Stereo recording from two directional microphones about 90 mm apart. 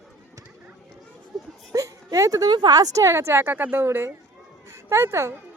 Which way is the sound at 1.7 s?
40° right (ahead or behind).